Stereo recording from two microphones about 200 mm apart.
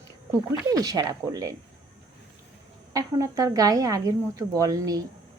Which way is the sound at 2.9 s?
15° right (ahead or behind).